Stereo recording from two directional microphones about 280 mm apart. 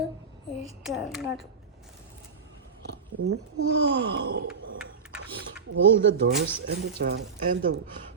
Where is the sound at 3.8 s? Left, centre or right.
Right.